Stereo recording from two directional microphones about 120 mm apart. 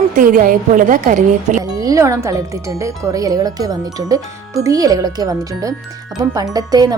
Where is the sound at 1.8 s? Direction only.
30° right (ahead or behind).